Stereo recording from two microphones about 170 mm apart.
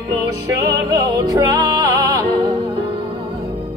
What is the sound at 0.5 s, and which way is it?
Music, 20° right (ahead or behind).